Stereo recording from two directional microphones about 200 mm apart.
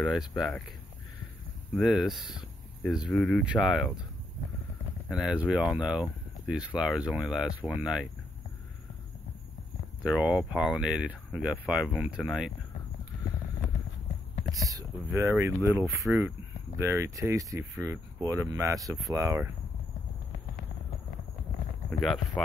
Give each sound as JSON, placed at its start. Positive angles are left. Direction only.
{"t": 0.0, "sound": "speech", "side_deg": 0}
{"t": 1.8, "sound": "speech", "side_deg": 0}
{"t": 5.1, "sound": "speech", "side_deg": -5}
{"t": 10.0, "sound": "speech", "side_deg": -5}
{"t": 14.5, "sound": "speech", "side_deg": -15}
{"t": 22.0, "sound": "speech", "side_deg": 0}